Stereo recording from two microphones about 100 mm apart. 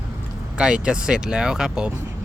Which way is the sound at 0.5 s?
10° right (ahead or behind).